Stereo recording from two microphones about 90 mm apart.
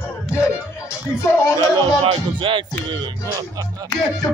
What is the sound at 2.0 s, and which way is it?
Music, 75° right (ahead or behind).